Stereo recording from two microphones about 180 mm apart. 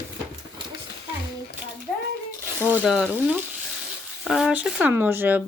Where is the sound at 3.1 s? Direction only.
10° right (ahead or behind).